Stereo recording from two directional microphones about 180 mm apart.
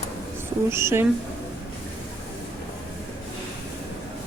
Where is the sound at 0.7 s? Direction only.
15° right (ahead or behind).